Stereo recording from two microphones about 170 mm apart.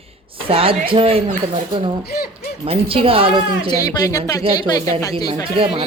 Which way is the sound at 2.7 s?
35° right (ahead or behind).